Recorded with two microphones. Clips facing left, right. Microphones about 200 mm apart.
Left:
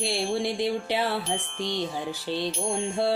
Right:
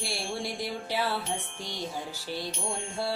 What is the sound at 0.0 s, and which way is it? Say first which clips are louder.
Music: left 7 dB; 20° left (ahead or behind).